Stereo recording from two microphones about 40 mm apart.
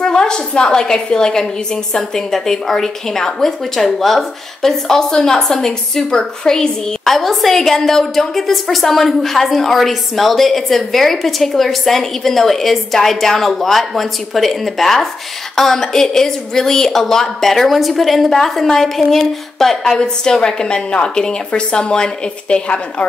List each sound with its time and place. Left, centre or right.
0.0 s a woman's voice: centre
7.1 s a woman's voice: centre; by 23.0 s left